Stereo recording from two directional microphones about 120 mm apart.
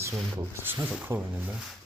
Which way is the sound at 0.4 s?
25° right (ahead or behind).